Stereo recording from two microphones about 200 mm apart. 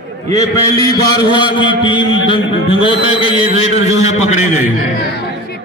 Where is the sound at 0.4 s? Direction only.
15° left (ahead or behind); by 4.5 s 35° left (ahead or behind).